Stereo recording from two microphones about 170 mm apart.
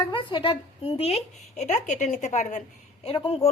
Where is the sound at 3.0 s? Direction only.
35° left (ahead or behind).